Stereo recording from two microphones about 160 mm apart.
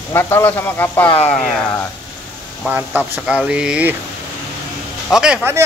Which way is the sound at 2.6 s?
10° right (ahead or behind).